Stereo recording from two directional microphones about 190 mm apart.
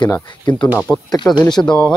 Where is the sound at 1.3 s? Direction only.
20° left (ahead or behind).